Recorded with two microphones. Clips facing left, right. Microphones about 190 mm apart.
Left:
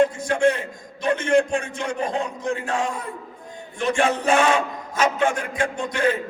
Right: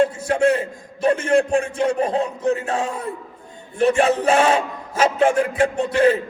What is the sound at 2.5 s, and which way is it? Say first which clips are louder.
A man's voice: right 2 dB; 25° right (ahead or behind).